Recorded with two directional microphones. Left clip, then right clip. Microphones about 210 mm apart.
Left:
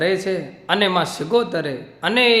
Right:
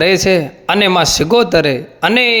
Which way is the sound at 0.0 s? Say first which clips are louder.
Right 9 dB; 40° right (ahead or behind).